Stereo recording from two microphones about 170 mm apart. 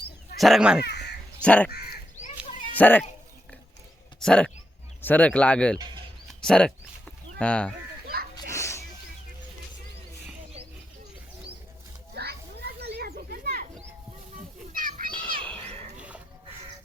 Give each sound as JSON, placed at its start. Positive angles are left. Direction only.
{"t": 0.3, "sound": "speech", "side_deg": 0}
{"t": 0.9, "sound": "crow", "side_deg": 80}
{"t": 1.4, "sound": "speech", "side_deg": 5}
{"t": 2.7, "sound": "speech", "side_deg": 10}
{"t": 4.2, "sound": "speech", "side_deg": 5}
{"t": 5.7, "sound": "speech", "side_deg": -25}
{"t": 6.2, "sound": "a sound", "side_deg": 5}
{"t": 7.3, "sound": "speech", "side_deg": 5}
{"t": 8.0, "sound": "a sound", "side_deg": -65}
{"t": 8.4, "sound": "a sound", "side_deg": 15}
{"t": 12.1, "sound": "children playing", "side_deg": -70}
{"t": 14.7, "sound": "children playing", "side_deg": -55}
{"t": 16.0, "sound": "a sound", "side_deg": -5}